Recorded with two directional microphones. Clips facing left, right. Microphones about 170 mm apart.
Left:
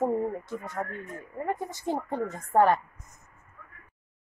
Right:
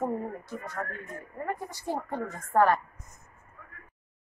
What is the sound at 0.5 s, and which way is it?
A woman's voice, 20° left (ahead or behind).